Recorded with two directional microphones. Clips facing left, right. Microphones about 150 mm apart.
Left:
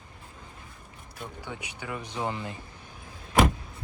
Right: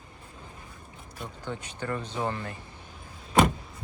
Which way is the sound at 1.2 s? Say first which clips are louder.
Right 2 dB; 10° left (ahead or behind).